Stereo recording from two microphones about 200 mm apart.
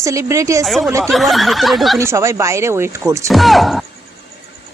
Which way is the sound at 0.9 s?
15° right (ahead or behind).